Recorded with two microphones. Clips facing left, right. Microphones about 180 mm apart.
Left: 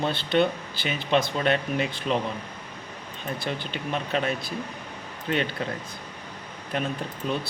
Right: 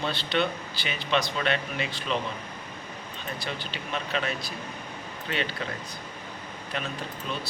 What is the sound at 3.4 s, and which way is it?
A man's voice, 50° left (ahead or behind).